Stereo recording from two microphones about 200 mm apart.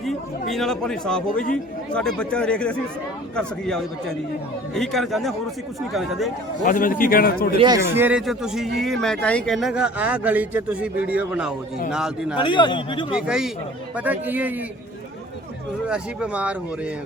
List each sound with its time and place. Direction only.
0.0 s speech: centre (ahead or behind)
6.7 s a man's voice: 45° left (ahead or behind)
7.5 s speech: 25° right (ahead or behind)
7.9 s speech: 5° right (ahead or behind)
12.4 s a man's voice: 25° left (ahead or behind)
13.1 s a man's voice: 5° right (ahead or behind)
15.9 s speech: 5° right (ahead or behind)